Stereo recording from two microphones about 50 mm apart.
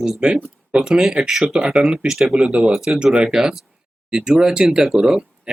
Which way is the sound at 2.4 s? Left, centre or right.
Right.